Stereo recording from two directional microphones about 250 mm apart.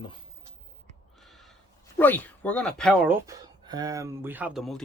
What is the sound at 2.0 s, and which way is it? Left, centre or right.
Speech, centre.